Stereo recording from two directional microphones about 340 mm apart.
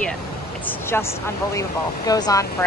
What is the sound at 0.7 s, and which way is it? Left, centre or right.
Speech, centre.